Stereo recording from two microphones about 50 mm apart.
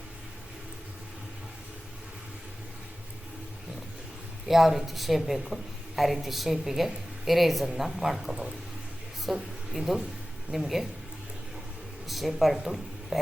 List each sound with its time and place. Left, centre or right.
4.4 s a woman's voice: centre
12.0 s a woman's voice: centre